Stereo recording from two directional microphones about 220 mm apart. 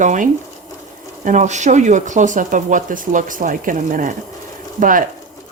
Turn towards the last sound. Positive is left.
turn(degrees=-35)  # may be behind; listen again after turning